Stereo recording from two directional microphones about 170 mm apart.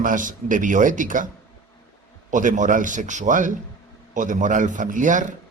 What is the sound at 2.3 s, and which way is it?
A man's voice, 50° right (ahead or behind).